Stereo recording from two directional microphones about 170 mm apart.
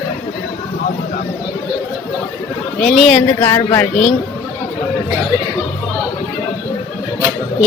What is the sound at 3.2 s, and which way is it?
Speech, 15° left (ahead or behind).